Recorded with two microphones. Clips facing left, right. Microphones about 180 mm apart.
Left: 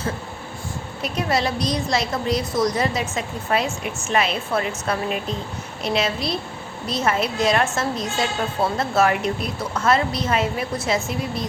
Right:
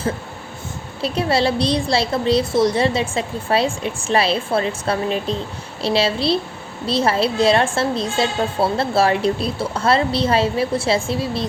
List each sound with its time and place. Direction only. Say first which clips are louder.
1.0 s a woman's voice: right 4 dB; 30° right (ahead or behind)